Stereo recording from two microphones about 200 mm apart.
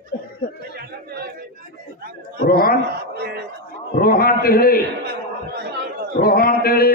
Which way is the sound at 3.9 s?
50° left (ahead or behind).